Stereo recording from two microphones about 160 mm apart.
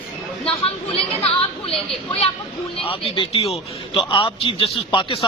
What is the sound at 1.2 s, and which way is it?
Chatter, 35° left (ahead or behind).